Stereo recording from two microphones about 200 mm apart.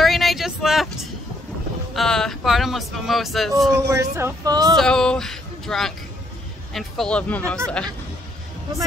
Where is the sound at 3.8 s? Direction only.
15° right (ahead or behind).